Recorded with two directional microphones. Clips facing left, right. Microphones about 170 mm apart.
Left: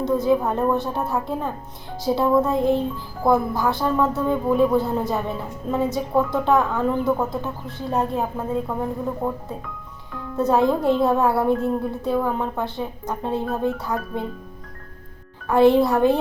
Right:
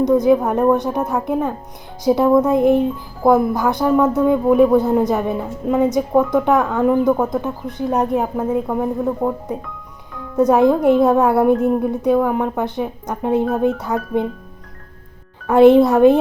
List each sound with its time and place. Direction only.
0.0 s a man's voice: 20° right (ahead or behind)
15.4 s speech: 20° right (ahead or behind)